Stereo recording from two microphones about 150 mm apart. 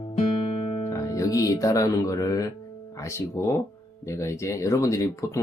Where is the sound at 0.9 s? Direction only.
20° left (ahead or behind).